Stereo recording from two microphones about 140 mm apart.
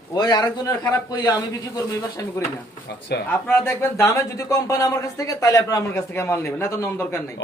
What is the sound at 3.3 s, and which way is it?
A man's voice, 15° left (ahead or behind).